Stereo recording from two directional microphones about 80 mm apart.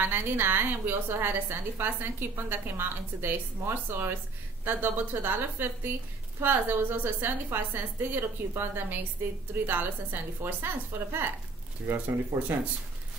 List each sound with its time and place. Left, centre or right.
0.0 s a woman's voice: right
11.9 s a woman's voice: right